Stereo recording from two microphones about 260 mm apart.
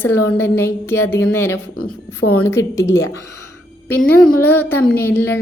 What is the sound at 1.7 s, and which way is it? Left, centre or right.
Speech, left.